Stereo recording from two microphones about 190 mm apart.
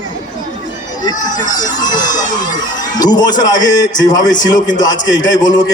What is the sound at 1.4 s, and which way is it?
A man's voice, 20° left (ahead or behind).